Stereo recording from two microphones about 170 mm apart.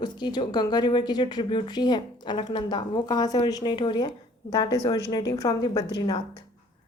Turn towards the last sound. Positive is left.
turn(degrees=25)  # may be behind; listen again after turning